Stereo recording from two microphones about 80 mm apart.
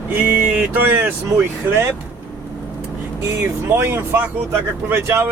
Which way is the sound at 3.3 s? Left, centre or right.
Right.